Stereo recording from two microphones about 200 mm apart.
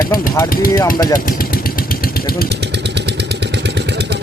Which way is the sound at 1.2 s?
45° left (ahead or behind).